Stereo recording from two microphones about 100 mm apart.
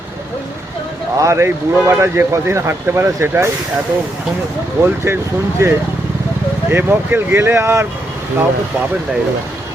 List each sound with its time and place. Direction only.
1.2 s speech: 30° right (ahead or behind)
4.8 s speech: 25° right (ahead or behind)